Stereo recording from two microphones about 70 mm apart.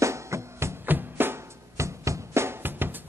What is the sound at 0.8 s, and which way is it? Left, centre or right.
Music, right.